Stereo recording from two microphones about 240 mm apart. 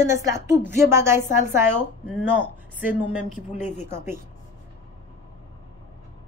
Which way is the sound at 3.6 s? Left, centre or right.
Left.